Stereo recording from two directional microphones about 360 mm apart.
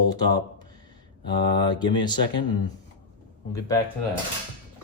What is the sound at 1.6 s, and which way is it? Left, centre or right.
Speech, centre.